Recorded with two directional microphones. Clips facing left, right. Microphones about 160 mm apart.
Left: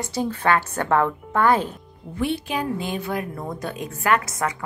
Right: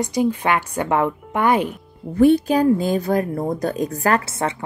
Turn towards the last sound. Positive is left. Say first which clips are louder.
# right 2 dB
turn(degrees=-30)  # may be behind; listen again after turning